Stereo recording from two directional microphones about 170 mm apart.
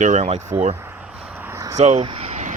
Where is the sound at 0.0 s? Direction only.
40° right (ahead or behind).